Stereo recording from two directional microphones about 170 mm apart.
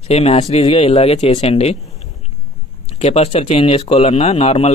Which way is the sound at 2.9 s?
40° left (ahead or behind).